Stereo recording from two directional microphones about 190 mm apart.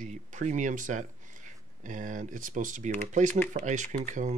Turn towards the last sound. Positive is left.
turn(degrees=-40)  # may be behind; listen again after turning